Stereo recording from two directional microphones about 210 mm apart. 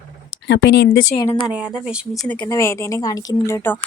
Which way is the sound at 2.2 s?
10° left (ahead or behind).